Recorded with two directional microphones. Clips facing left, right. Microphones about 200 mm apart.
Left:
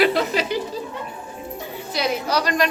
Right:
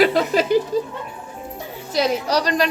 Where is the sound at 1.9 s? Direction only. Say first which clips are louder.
Right 3 dB; 40° right (ahead or behind).